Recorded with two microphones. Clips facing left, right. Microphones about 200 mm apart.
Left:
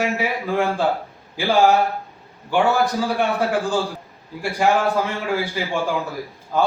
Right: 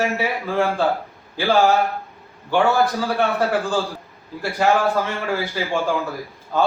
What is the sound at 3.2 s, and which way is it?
A man's voice, 15° left (ahead or behind).